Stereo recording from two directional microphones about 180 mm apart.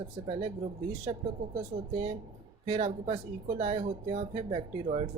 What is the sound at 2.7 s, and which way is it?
Speech, 30° right (ahead or behind).